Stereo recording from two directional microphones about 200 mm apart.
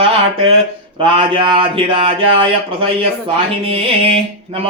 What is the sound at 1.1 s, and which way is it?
Mantra, 25° right (ahead or behind).